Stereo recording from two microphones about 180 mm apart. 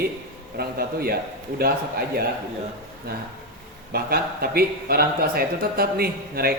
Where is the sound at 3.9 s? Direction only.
60° right (ahead or behind).